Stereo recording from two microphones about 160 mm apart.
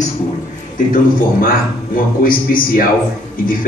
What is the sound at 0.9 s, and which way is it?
A man's voice, 60° left (ahead or behind).